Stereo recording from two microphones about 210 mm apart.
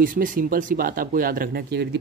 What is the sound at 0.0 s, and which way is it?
Speech, 40° right (ahead or behind).